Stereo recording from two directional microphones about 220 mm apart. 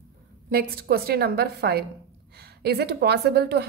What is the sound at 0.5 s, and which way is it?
A woman's voice, 40° right (ahead or behind).